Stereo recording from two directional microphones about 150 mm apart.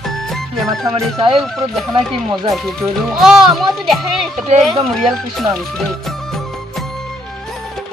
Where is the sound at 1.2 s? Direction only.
35° right (ahead or behind).